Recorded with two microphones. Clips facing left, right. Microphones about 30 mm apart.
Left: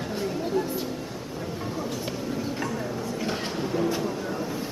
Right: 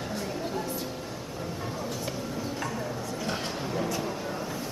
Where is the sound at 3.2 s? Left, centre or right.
Centre.